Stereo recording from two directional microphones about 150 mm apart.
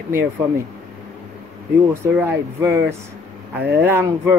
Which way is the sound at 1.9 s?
15° right (ahead or behind).